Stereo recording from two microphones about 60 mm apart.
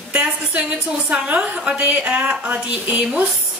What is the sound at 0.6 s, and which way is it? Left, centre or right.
A woman's voice, right.